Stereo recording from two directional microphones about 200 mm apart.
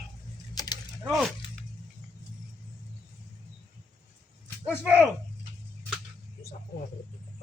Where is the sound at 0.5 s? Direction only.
20° left (ahead or behind).